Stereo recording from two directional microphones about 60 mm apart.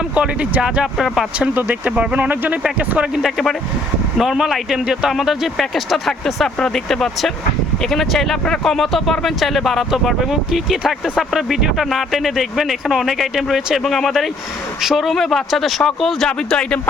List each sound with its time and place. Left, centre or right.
0.1 s speech: right
1.0 s a man's voice: centre
1.5 s speech: right
3.2 s a man's voice: centre